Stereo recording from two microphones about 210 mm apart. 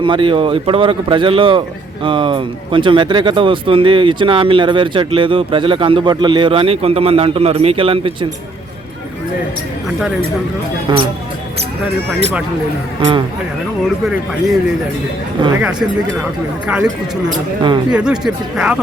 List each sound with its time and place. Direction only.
0.0 s speech: 25° right (ahead or behind)
14.1 s speech: centre (ahead or behind)
15.4 s speech: 20° right (ahead or behind)
16.6 s speech: 5° right (ahead or behind)
17.9 s speech: 5° right (ahead or behind)